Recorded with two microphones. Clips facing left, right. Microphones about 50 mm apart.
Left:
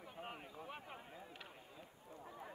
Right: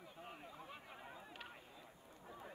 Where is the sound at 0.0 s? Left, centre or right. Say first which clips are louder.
Left 3 dB; left.